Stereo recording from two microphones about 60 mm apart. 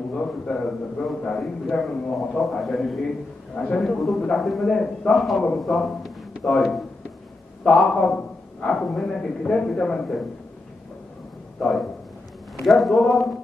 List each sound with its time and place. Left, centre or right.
0.1 s a man's voice: centre
3.5 s a man's voice: centre
3.8 s a man's voice: centre
5.1 s a man's voice: centre
11.6 s speech: centre